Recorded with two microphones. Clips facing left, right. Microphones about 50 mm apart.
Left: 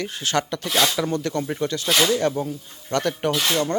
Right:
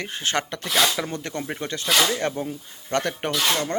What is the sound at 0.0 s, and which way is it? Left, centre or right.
Speech, right.